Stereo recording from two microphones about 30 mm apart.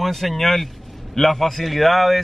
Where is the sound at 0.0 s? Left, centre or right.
Centre.